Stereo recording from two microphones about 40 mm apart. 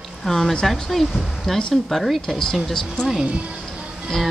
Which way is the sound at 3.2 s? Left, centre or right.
Right.